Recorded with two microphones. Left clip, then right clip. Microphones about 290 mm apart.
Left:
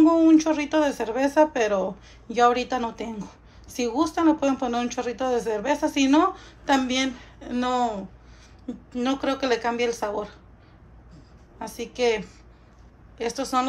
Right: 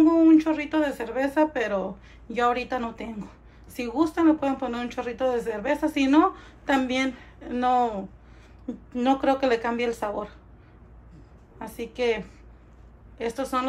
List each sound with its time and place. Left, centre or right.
0.0 s speech: centre
11.5 s speech: centre